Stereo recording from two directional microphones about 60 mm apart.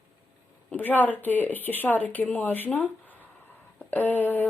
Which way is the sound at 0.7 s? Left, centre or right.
Left.